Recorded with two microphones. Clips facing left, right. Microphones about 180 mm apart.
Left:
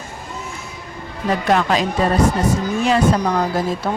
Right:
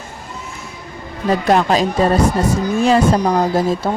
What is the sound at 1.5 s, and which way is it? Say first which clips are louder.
A woman's voice: right 3 dB; 35° right (ahead or behind).